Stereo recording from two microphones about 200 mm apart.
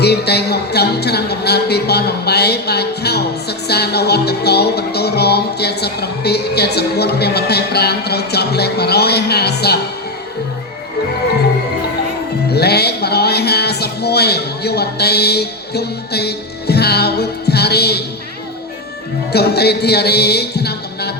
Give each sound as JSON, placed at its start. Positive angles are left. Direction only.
{"t": 0.0, "sound": "music", "side_deg": 55}
{"t": 12.5, "sound": "music", "side_deg": 55}
{"t": 19.3, "sound": "music", "side_deg": 55}